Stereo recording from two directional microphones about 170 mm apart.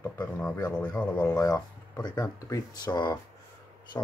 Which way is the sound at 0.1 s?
10° left (ahead or behind).